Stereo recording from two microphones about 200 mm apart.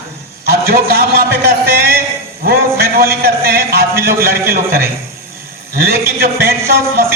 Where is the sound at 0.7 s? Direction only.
50° right (ahead or behind).